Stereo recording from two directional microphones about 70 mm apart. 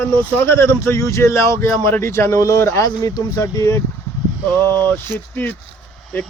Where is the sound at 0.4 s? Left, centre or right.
Left.